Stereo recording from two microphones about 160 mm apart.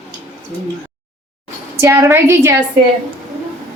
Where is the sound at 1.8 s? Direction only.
15° right (ahead or behind).